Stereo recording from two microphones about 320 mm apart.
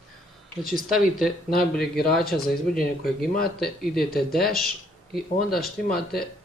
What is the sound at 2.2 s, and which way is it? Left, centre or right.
Speech, left.